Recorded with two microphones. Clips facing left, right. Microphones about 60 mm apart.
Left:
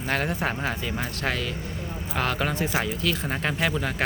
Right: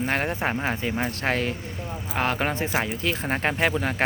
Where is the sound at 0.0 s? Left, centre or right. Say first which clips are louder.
Right 1 dB; right.